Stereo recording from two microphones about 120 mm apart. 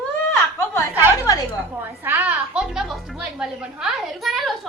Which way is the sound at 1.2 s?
30° left (ahead or behind).